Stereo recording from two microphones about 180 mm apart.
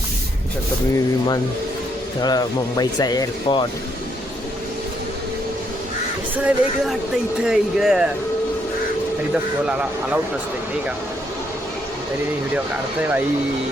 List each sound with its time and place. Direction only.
2.2 s speech: 20° left (ahead or behind)
6.3 s speech: 5° right (ahead or behind)
9.6 s speech: 5° right (ahead or behind)